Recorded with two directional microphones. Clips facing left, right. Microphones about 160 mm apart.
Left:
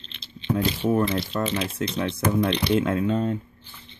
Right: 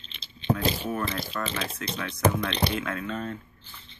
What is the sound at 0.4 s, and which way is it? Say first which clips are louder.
Speech: left 2 dB; 30° left (ahead or behind).